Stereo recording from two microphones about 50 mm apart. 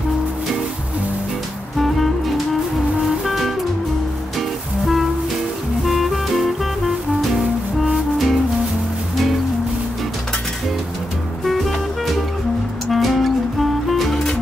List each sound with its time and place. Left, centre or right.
1.8 s music: centre
7.8 s music: centre
11.4 s music: centre